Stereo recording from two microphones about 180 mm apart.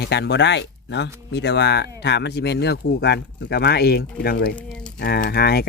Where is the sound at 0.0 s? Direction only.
65° left (ahead or behind).